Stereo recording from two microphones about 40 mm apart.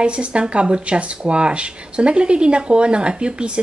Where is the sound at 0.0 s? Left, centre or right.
Right.